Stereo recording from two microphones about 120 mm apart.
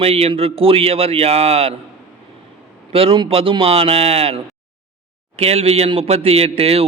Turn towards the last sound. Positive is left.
turn(degrees=-55)  # may be behind; listen again after turning